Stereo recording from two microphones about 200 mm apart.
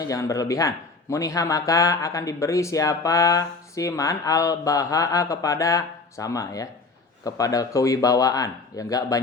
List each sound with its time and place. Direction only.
0.0 s speech: 15° left (ahead or behind)